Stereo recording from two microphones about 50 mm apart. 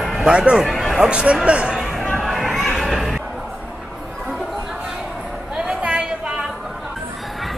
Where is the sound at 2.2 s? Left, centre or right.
Centre.